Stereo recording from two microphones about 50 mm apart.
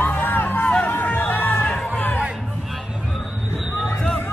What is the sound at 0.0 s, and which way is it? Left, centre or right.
Music, left.